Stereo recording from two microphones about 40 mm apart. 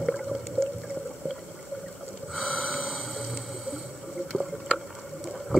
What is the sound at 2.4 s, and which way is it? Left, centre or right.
Snort, centre.